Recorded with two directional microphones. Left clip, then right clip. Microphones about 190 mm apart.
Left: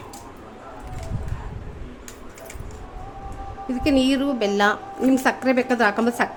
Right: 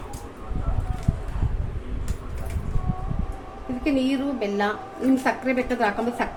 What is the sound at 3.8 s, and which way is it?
A woman's voice, 55° left (ahead or behind).